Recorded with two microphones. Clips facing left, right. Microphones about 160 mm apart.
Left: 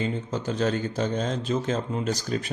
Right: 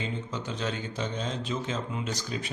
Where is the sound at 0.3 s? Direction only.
40° left (ahead or behind).